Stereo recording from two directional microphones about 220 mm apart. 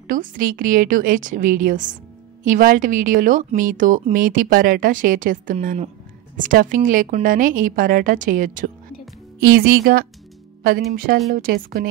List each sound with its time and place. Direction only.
0.1 s a woman's voice: 40° right (ahead or behind)
11.3 s a woman's voice: 45° right (ahead or behind)